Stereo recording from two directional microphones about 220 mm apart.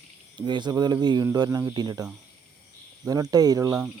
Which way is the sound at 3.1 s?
15° right (ahead or behind).